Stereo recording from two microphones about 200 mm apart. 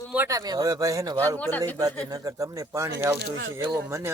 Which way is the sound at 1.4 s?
10° left (ahead or behind).